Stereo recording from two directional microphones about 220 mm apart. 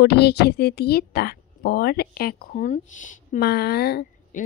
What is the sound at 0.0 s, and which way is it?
Speech, 50° left (ahead or behind).